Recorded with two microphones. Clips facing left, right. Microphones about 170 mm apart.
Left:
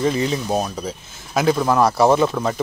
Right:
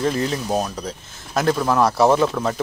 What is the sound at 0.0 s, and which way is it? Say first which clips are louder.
Speech: left 2 dB; centre (ahead or behind).